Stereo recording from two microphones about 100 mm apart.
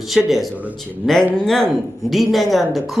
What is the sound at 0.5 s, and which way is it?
Speech, 15° right (ahead or behind).